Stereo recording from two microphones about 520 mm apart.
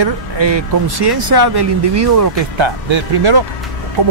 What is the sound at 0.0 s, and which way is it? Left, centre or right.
Speech, right.